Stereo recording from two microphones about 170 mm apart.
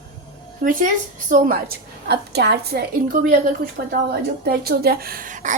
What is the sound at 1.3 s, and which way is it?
A woman's voice, 55° right (ahead or behind).